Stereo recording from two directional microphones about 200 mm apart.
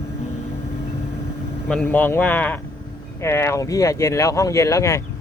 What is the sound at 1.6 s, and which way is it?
Speech, 5° left (ahead or behind).